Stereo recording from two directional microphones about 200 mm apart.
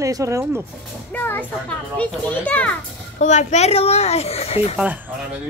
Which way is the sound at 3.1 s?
35° left (ahead or behind).